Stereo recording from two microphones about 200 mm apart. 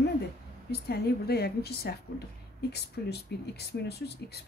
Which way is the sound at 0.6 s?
55° left (ahead or behind).